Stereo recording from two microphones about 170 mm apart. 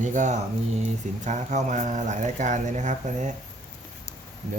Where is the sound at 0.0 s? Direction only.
45° right (ahead or behind).